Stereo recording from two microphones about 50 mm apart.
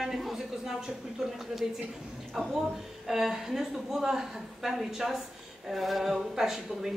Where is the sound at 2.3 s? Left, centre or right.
Centre.